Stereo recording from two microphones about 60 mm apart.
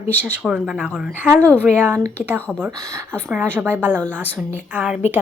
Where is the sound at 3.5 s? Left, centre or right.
Right.